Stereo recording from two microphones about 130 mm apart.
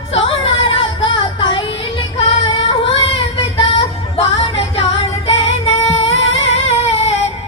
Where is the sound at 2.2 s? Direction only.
45° left (ahead or behind).